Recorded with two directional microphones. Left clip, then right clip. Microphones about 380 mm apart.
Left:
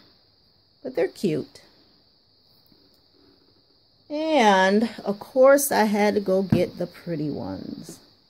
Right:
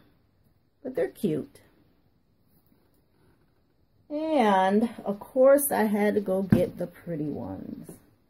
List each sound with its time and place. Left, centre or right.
0.8 s speech: centre
4.1 s speech: left